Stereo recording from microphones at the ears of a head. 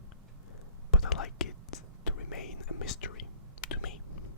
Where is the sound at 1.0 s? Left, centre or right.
Left.